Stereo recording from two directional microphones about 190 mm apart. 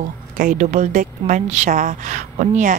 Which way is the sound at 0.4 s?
45° right (ahead or behind).